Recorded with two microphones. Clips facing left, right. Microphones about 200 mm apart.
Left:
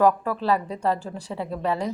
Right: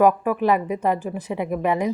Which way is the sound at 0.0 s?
15° right (ahead or behind).